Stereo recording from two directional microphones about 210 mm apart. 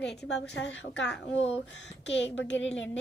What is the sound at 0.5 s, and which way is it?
A woman's voice, 60° left (ahead or behind).